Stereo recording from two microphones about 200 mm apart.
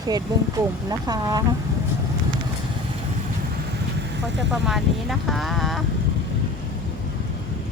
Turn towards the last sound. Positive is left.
turn(degrees=0)  # may be behind; listen again after turning